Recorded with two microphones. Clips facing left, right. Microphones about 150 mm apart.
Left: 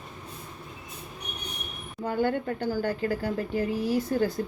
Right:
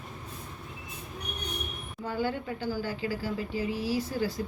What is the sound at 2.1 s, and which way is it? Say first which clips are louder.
Speech: left 5 dB; 55° left (ahead or behind).